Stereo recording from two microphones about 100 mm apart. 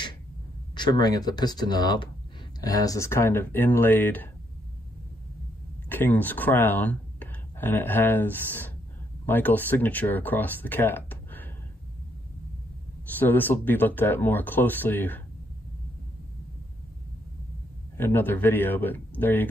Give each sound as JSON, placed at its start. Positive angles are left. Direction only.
{"t": 0.7, "sound": "speech", "side_deg": 45}
{"t": 5.9, "sound": "speech", "side_deg": 20}
{"t": 13.2, "sound": "speech", "side_deg": 20}
{"t": 17.9, "sound": "speech", "side_deg": 20}